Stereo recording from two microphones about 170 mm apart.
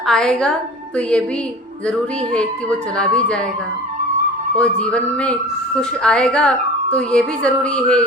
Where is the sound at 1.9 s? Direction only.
5° left (ahead or behind).